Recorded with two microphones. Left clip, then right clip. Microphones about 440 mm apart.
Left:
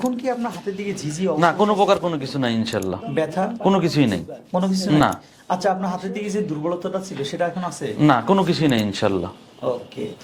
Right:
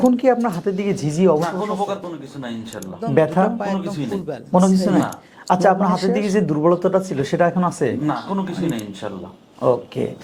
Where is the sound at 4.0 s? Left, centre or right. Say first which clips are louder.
Left 6 dB; left.